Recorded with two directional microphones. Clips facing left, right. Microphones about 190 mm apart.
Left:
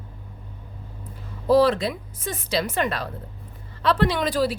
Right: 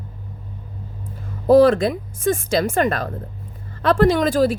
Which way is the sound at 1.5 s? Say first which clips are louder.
Right 6 dB; 50° right (ahead or behind).